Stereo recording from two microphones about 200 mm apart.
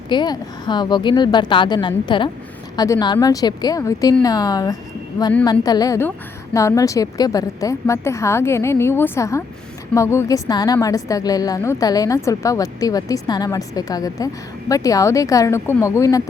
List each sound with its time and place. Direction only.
0.1 s a woman's voice: 20° left (ahead or behind)